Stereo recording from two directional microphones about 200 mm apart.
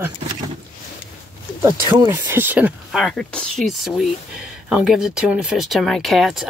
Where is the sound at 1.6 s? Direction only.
20° right (ahead or behind).